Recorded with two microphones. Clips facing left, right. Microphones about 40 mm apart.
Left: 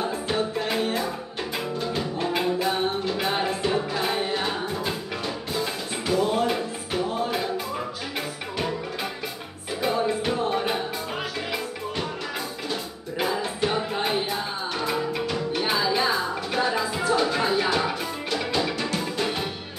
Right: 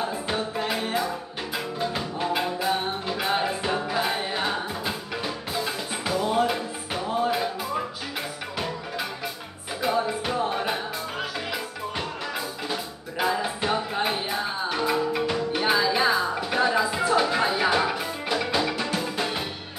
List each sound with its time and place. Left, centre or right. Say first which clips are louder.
0.0 s music: left 2 dB; centre
9.8 s music: left 1 dB; centre
13.2 s music: even; centre